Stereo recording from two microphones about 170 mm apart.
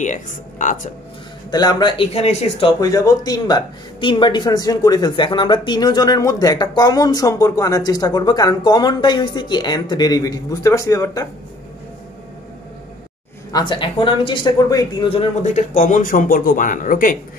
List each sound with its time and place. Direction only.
0.0 s speech: 45° left (ahead or behind)
1.5 s speech: 25° left (ahead or behind)
2.8 s speech: 20° left (ahead or behind)
13.5 s speech: 25° left (ahead or behind)
15.0 s speech: 35° left (ahead or behind); by 17.2 s 55° left (ahead or behind)